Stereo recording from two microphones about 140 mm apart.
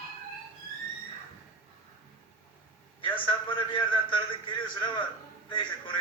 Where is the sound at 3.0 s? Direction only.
35° left (ahead or behind).